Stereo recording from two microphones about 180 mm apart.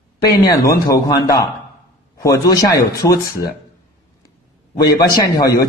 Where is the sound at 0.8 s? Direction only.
20° left (ahead or behind).